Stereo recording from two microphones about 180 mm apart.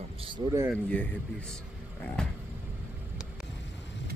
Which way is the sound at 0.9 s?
10° left (ahead or behind).